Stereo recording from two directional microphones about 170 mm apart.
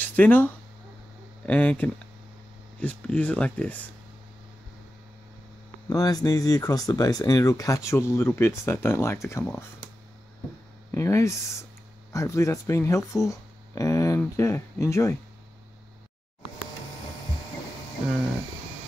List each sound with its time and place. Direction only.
0.0 s speech: 10° left (ahead or behind)
5.9 s speech: 20° left (ahead or behind)
10.9 s speech: 15° left (ahead or behind)